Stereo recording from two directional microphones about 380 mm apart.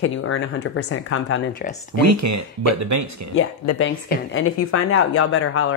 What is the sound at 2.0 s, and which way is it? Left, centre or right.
Speech, right.